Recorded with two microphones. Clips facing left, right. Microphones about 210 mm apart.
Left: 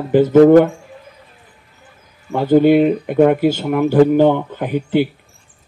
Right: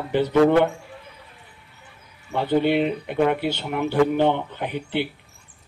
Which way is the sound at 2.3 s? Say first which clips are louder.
Left 9 dB; 45° left (ahead or behind).